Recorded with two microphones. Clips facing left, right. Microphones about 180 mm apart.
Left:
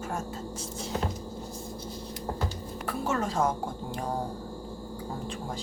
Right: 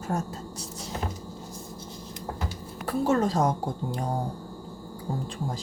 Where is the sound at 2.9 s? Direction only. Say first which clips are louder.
Right 6 dB; 35° right (ahead or behind).